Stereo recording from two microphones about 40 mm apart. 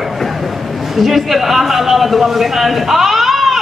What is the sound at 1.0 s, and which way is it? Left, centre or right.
A man's voice, centre.